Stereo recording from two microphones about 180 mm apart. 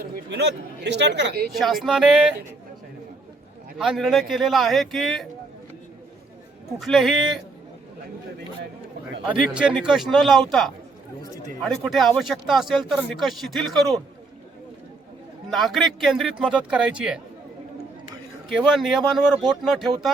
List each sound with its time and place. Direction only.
0.0 s speech: 70° right (ahead or behind)
1.5 s speech: centre (ahead or behind)
3.8 s speech: centre (ahead or behind)
6.7 s speech: centre (ahead or behind)
9.2 s speech: 5° right (ahead or behind)
15.4 s speech: centre (ahead or behind)
18.4 s speech: centre (ahead or behind)